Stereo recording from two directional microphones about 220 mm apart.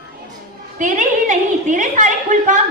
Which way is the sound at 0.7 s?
35° right (ahead or behind).